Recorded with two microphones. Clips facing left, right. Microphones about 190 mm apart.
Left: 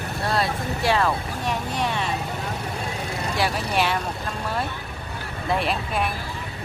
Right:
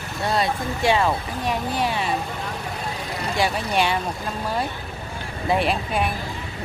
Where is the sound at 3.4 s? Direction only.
Centre (ahead or behind).